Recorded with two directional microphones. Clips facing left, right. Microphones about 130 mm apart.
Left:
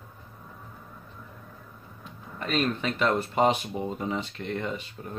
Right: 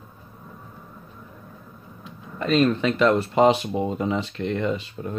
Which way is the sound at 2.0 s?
90° right.